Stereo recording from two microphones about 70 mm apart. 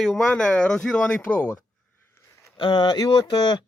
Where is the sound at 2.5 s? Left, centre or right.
Left.